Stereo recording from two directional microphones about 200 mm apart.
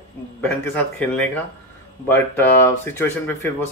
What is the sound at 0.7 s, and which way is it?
Speech, 5° left (ahead or behind).